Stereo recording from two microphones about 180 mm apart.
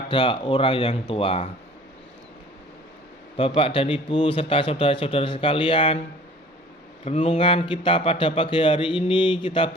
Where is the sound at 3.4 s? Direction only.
30° left (ahead or behind).